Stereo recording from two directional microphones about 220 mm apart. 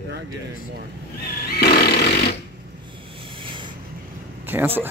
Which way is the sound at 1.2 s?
45° left (ahead or behind).